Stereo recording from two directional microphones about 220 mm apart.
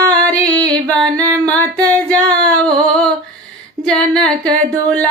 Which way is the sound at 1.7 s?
15° right (ahead or behind).